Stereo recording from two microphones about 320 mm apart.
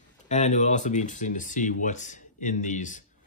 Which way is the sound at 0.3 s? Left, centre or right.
Left.